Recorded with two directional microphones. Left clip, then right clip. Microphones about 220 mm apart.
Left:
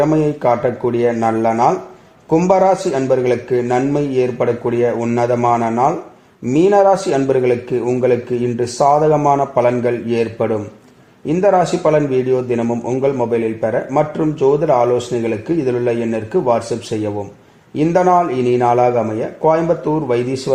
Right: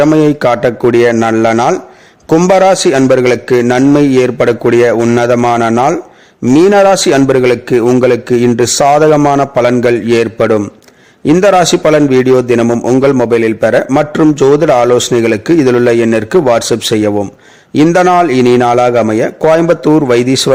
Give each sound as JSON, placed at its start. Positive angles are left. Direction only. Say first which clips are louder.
{"t": 0.0, "sound": "a man's voice", "louder": "right 7 dB", "side_deg": -40}